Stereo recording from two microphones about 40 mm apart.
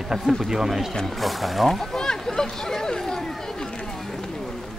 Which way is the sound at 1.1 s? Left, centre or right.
Centre.